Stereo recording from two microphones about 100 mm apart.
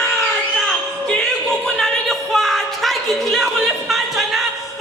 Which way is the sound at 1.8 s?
5° left (ahead or behind).